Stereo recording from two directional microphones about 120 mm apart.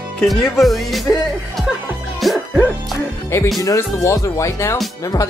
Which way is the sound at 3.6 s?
25° left (ahead or behind).